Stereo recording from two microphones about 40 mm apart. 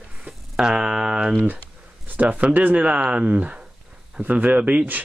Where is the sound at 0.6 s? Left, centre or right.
Centre.